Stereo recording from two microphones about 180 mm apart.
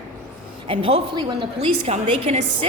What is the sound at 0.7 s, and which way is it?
A woman's voice, 30° right (ahead or behind).